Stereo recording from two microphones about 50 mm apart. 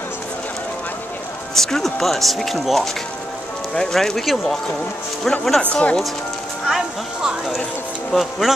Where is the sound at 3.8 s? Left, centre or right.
Centre.